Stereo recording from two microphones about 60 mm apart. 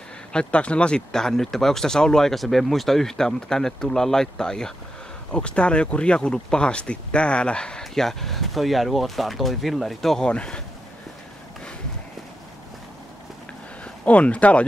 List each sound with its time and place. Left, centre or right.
0.3 s speech: centre
10.2 s speech: centre
13.8 s speech: left